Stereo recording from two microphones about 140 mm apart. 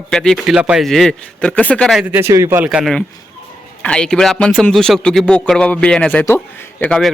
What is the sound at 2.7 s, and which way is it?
A man's voice, centre (ahead or behind).